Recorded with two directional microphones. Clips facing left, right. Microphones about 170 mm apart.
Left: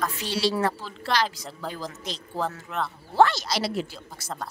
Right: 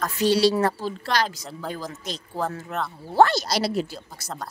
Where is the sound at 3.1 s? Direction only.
40° right (ahead or behind).